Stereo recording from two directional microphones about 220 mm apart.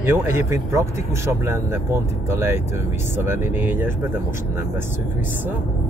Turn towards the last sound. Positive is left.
turn(degrees=-10)  # may be behind; listen again after turning